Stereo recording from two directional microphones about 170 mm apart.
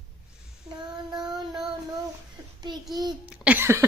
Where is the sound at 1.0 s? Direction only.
25° right (ahead or behind).